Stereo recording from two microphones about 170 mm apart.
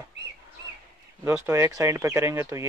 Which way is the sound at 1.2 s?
15° right (ahead or behind).